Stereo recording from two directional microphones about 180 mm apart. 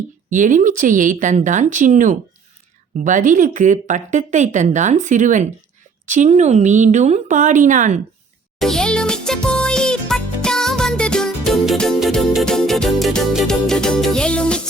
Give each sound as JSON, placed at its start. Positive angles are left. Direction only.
{"t": 0.3, "sound": "speech", "side_deg": -45}
{"t": 8.5, "sound": "music for children", "side_deg": 0}